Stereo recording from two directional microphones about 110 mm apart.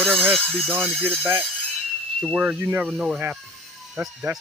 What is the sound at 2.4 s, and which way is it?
Speech, 15° right (ahead or behind).